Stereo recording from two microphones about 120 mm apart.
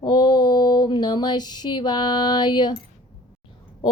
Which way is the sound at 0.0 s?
40° left (ahead or behind).